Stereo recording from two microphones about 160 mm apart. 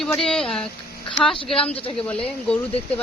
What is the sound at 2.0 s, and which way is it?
Speech, 10° left (ahead or behind).